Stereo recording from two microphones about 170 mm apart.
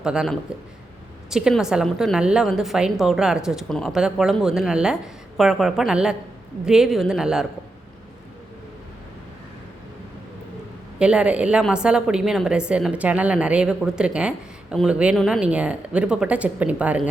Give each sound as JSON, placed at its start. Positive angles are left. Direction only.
{"t": 0.0, "sound": "a woman's voice", "side_deg": -5}
{"t": 11.0, "sound": "a woman's voice", "side_deg": -5}